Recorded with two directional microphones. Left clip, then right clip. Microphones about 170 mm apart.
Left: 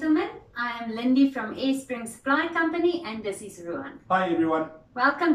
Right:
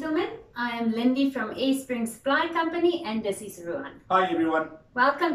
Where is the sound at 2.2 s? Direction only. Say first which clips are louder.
Left 1 dB; 15° right (ahead or behind).